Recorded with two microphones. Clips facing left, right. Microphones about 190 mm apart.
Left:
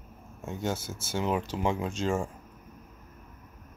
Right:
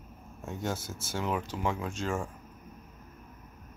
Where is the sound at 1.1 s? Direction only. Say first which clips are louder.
Left 3 dB; 25° left (ahead or behind).